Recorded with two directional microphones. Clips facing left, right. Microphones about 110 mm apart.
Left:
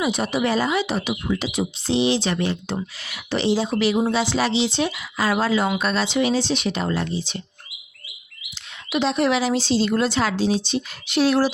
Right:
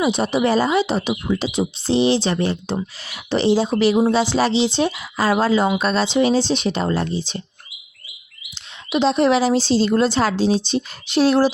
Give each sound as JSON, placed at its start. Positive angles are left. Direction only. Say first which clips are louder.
{"t": 0.0, "sound": "speech", "louder": "right 4 dB", "side_deg": -30}
{"t": 8.9, "sound": "speech", "louder": "right 4 dB", "side_deg": -25}